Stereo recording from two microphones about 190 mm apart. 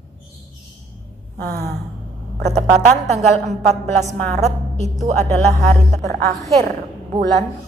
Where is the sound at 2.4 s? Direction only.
35° right (ahead or behind).